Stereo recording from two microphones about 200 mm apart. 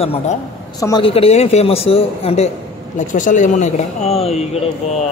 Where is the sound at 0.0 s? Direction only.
30° left (ahead or behind).